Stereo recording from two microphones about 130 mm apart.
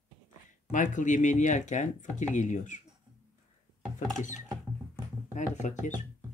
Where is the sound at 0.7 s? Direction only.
80° left.